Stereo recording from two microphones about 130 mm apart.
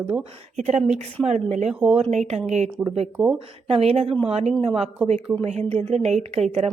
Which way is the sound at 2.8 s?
50° right (ahead or behind).